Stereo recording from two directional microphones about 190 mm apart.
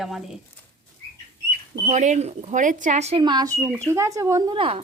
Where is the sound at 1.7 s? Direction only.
35° right (ahead or behind).